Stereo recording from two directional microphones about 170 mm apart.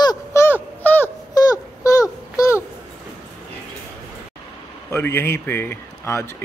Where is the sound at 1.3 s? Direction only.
20° left (ahead or behind).